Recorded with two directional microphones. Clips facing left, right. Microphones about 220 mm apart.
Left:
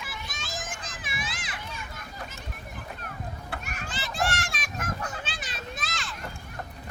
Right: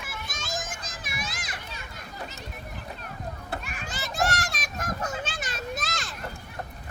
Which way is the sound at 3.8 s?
40° right (ahead or behind).